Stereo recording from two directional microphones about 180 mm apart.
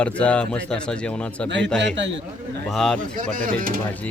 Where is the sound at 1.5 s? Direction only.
80° right.